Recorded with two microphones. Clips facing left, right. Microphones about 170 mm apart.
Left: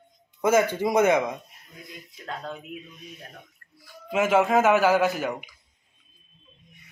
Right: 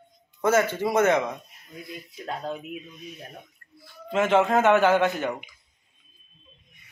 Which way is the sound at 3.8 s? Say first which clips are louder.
Even; 10° left (ahead or behind).